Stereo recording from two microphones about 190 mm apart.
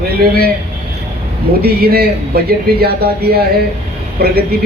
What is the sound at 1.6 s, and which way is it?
A man's voice, 55° right (ahead or behind).